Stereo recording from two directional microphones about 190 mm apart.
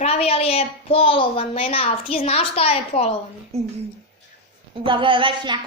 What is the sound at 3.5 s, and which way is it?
Speech, 35° right (ahead or behind).